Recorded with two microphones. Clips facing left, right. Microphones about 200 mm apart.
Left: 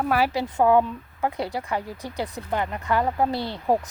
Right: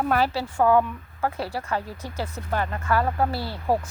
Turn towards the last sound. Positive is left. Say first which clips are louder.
# left 2 dB
turn(degrees=20)  # may be behind; listen again after turning